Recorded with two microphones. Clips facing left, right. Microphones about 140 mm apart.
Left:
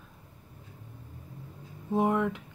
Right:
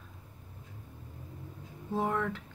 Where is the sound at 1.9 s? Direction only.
15° left (ahead or behind).